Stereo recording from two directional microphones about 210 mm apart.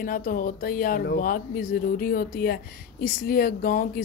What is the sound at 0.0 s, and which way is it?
Speech, 40° left (ahead or behind).